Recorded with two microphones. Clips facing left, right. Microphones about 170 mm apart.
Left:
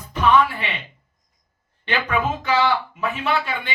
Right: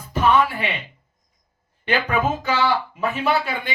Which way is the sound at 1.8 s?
40° right (ahead or behind).